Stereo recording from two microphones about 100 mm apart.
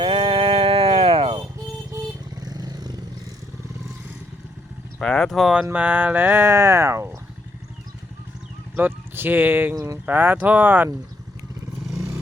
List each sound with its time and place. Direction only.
0.0 s a sound: 60° right (ahead or behind)
2.4 s vehicle: 40° right (ahead or behind)
4.9 s speech: 10° left (ahead or behind); by 7.2 s 25° right (ahead or behind)
8.7 s speech: 20° right (ahead or behind)
11.9 s vehicle: 30° right (ahead or behind)